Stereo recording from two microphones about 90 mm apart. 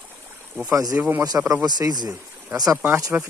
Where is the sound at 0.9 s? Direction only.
15° right (ahead or behind).